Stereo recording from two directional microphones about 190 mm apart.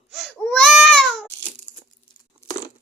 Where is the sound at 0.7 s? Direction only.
Centre (ahead or behind).